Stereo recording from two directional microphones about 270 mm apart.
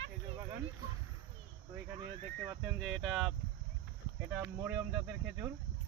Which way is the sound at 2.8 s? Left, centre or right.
Centre.